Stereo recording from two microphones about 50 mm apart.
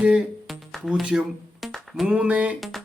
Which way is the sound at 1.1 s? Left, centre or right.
Centre.